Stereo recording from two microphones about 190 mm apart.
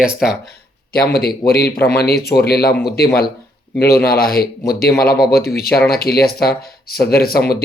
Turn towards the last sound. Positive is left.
turn(degrees=55)  # may be behind; listen again after turning